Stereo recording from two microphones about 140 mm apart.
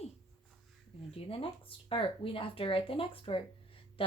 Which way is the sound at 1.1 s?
40° left (ahead or behind).